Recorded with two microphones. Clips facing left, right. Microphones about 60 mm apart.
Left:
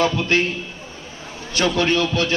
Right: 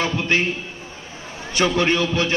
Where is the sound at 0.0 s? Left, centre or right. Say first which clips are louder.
Left 2 dB; right.